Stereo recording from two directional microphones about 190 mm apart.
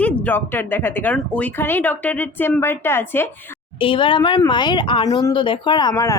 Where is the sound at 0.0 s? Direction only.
10° left (ahead or behind).